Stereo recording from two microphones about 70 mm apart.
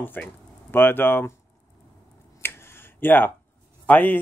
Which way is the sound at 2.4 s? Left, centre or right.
Left.